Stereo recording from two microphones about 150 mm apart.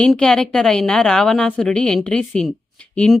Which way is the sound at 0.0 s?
5° left (ahead or behind).